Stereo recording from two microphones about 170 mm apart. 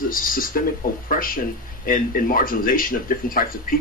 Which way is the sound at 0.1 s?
55° left (ahead or behind).